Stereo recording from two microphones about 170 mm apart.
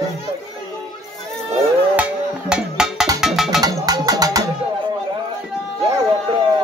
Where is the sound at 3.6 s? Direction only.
20° right (ahead or behind).